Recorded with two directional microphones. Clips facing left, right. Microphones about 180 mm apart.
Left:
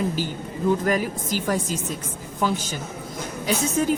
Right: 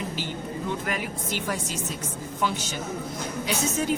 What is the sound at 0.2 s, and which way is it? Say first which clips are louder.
Speech: left 4 dB; 40° left (ahead or behind).